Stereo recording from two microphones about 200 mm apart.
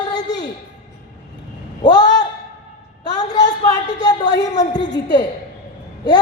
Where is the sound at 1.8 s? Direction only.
20° left (ahead or behind).